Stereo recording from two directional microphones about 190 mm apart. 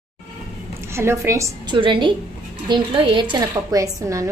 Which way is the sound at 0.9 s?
15° right (ahead or behind).